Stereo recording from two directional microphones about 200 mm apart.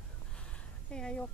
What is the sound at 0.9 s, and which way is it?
Speech, 5° left (ahead or behind).